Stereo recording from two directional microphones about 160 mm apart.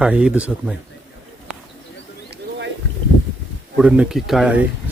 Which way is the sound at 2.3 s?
90° right.